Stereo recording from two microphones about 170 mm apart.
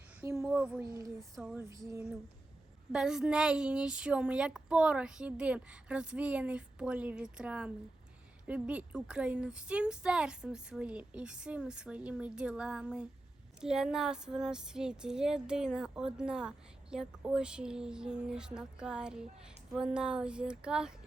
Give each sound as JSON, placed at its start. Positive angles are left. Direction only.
{"t": 0.2, "sound": "speech", "side_deg": -15}
{"t": 0.8, "sound": "a sound", "side_deg": -20}
{"t": 2.9, "sound": "speech", "side_deg": -5}